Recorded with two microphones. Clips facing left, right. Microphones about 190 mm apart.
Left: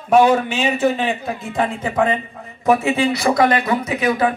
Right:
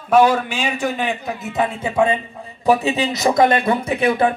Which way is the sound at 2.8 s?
20° right (ahead or behind).